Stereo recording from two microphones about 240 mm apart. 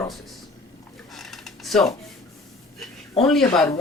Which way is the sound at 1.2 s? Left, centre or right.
Centre.